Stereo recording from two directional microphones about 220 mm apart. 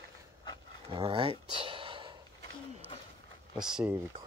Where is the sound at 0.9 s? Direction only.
20° right (ahead or behind).